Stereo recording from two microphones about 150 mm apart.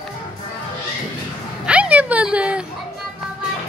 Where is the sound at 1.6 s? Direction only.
10° right (ahead or behind).